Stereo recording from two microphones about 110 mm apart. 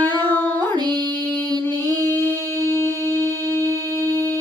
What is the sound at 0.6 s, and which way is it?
Music, 40° right (ahead or behind).